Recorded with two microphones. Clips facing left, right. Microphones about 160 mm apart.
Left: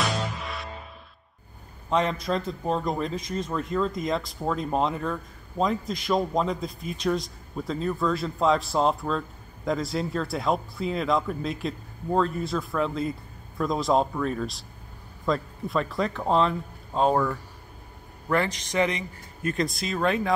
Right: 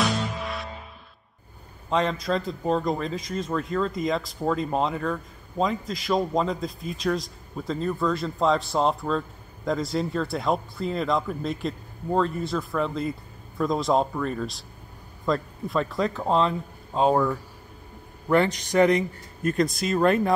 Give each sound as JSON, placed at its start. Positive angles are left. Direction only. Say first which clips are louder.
{"t": 0.0, "sound": "music", "louder": "right 3 dB", "side_deg": 0}
{"t": 1.9, "sound": "a man's voice", "louder": "right 1 dB", "side_deg": 0}
{"t": 18.5, "sound": "speech", "louder": "right 6 dB", "side_deg": -45}